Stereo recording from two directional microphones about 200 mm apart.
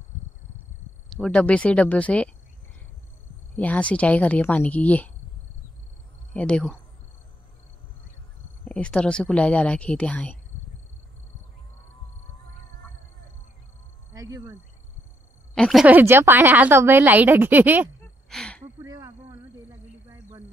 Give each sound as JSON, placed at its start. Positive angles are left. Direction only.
{"t": 1.1, "sound": "speech", "side_deg": 5}
{"t": 3.5, "sound": "speech", "side_deg": 5}
{"t": 6.3, "sound": "speech", "side_deg": 5}
{"t": 8.6, "sound": "speech", "side_deg": 5}
{"t": 14.1, "sound": "speech", "side_deg": -15}
{"t": 15.5, "sound": "a woman's voice", "side_deg": 0}
{"t": 18.3, "sound": "speech", "side_deg": 5}
{"t": 18.6, "sound": "a sound", "side_deg": -20}